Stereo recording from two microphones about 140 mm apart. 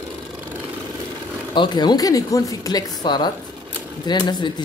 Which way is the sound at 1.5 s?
30° left (ahead or behind).